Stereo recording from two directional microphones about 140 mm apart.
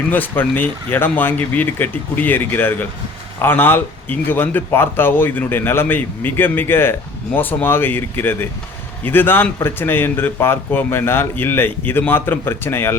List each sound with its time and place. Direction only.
0.1 s speech: 15° left (ahead or behind)